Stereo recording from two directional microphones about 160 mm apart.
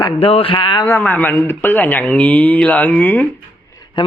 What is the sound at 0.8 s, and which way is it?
A man's voice, 10° left (ahead or behind).